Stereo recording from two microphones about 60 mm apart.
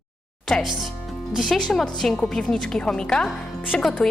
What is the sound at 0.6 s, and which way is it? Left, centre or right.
A woman's voice, centre.